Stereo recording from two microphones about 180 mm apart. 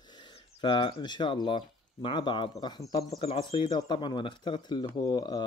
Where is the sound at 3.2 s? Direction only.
30° left (ahead or behind).